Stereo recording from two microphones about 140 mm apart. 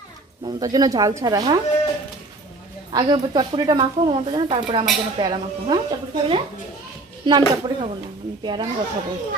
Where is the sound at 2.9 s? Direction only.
30° right (ahead or behind).